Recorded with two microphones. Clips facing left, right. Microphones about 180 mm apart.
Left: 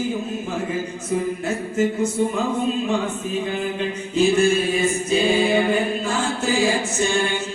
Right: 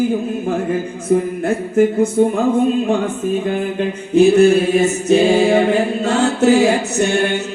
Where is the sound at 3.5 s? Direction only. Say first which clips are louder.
Right 5 dB; 50° right (ahead or behind).